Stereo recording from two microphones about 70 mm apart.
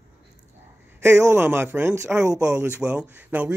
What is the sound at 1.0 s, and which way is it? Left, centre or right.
Speech, right.